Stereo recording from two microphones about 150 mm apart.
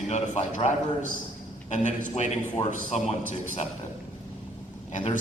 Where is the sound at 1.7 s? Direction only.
55° left (ahead or behind).